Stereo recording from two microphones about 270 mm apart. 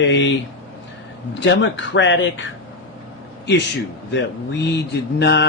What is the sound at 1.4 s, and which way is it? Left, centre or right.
Speech, left.